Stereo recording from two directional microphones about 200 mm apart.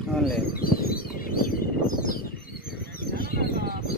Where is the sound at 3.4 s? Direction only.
50° right (ahead or behind).